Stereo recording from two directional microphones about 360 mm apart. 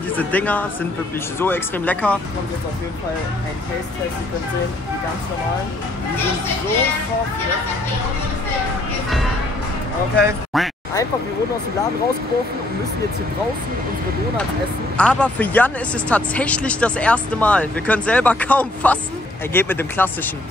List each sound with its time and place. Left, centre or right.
0.2 s speech: centre
10.2 s speech: centre
15.0 s speech: centre